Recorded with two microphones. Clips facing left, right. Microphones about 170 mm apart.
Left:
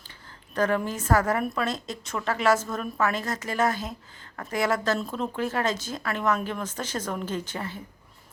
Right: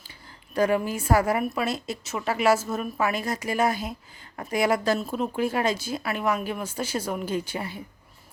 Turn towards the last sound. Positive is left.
turn(degrees=-10)  # may be behind; listen again after turning